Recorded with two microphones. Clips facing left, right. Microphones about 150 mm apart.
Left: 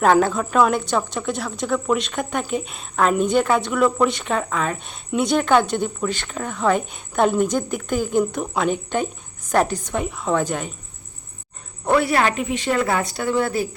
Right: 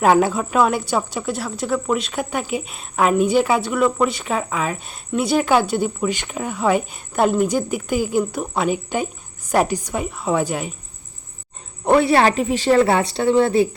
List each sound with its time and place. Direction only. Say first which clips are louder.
0.0 s a woman's voice: right 1 dB; 10° right (ahead or behind)
11.9 s a woman's voice: right 4 dB; 25° right (ahead or behind)